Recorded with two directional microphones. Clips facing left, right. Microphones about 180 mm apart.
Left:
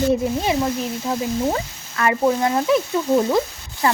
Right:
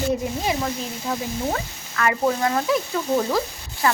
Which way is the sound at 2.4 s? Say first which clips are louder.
Left 3 dB; 25° left (ahead or behind).